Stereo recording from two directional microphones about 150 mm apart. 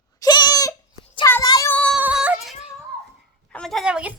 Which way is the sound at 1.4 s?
25° left (ahead or behind).